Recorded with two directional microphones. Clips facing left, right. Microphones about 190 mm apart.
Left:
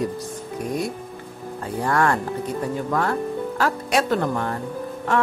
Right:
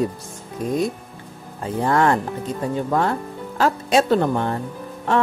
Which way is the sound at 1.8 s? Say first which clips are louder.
Right 3 dB; 20° right (ahead or behind).